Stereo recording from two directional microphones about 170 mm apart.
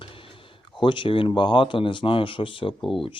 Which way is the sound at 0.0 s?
30° left (ahead or behind).